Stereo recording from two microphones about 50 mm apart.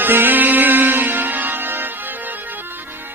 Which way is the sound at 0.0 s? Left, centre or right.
Right.